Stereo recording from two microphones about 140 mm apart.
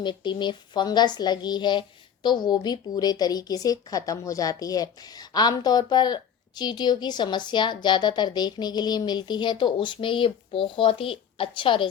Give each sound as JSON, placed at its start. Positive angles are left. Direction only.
{"t": 0.0, "sound": "speech", "side_deg": 35}